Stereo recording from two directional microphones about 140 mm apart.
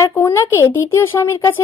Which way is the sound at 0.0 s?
20° left (ahead or behind).